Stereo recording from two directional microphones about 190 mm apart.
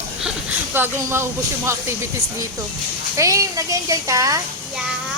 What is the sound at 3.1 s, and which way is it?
A woman's voice, 15° right (ahead or behind).